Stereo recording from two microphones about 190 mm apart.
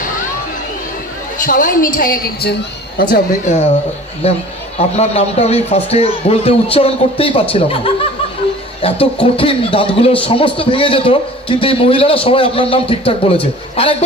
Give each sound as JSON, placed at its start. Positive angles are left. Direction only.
{"t": 1.5, "sound": "a woman's voice", "side_deg": 45}
{"t": 3.0, "sound": "a man's voice", "side_deg": 45}
{"t": 4.8, "sound": "a man's voice", "side_deg": 35}